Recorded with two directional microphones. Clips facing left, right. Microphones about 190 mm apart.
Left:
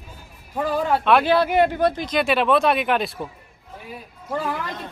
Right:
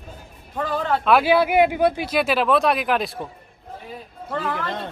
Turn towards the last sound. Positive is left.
turn(degrees=10)  # may be behind; listen again after turning